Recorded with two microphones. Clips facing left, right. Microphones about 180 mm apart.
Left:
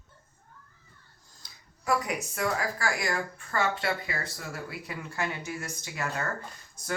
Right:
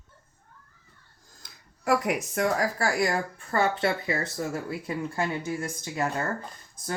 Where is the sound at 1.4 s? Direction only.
55° right (ahead or behind).